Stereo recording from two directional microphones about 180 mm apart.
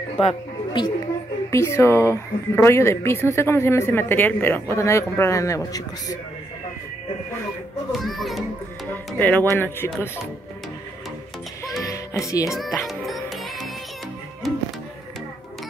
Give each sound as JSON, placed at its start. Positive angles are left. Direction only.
{"t": 0.2, "sound": "speech", "side_deg": 30}
{"t": 1.5, "sound": "speech", "side_deg": 15}
{"t": 8.0, "sound": "a child's voice", "side_deg": 0}
{"t": 11.6, "sound": "music", "side_deg": 20}
{"t": 12.4, "sound": "a child's voice", "side_deg": 0}
{"t": 12.8, "sound": "music", "side_deg": 0}